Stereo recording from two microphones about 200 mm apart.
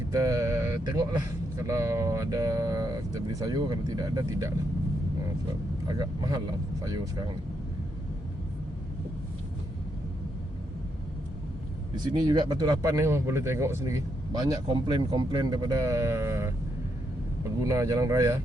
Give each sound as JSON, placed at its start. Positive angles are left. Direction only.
{"t": 0.1, "sound": "speech", "side_deg": -15}
{"t": 5.9, "sound": "speech", "side_deg": -20}
{"t": 12.1, "sound": "speech", "side_deg": -20}
{"t": 17.6, "sound": "speech", "side_deg": -15}